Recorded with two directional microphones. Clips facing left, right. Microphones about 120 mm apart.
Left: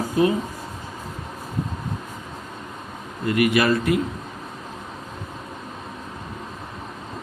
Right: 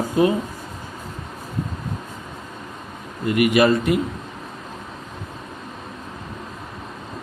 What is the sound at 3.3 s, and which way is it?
Speech, 20° right (ahead or behind).